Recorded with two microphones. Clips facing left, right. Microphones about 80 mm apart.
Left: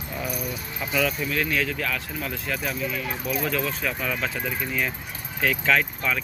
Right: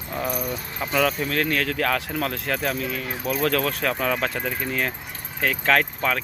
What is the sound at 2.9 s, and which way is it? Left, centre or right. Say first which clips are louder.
Speech: right 1 dB; right.